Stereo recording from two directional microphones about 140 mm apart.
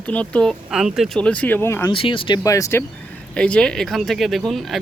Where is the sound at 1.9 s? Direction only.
40° left (ahead or behind).